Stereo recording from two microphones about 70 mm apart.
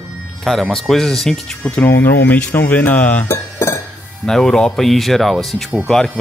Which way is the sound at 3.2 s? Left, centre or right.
Left.